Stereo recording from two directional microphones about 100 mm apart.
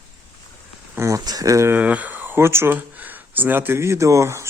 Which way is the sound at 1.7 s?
15° right (ahead or behind).